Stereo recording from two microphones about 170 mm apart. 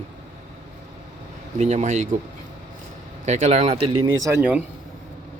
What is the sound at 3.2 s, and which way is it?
Speech, 45° right (ahead or behind).